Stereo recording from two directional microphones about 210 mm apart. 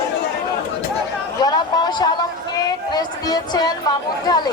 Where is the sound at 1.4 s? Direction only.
20° left (ahead or behind).